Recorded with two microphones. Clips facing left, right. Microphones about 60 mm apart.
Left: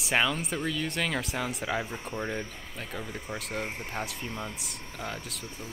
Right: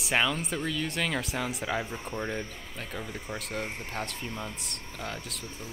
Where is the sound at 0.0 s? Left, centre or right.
Centre.